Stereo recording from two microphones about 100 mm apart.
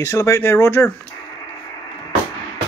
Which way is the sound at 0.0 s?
30° left (ahead or behind).